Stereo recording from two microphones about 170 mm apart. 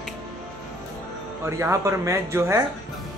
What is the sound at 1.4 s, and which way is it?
A man's voice, 15° right (ahead or behind).